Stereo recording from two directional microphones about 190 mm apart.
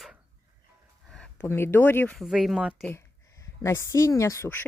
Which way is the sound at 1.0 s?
5° left (ahead or behind).